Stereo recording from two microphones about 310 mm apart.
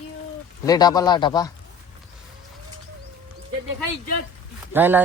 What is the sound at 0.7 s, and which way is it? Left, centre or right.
Speech, centre.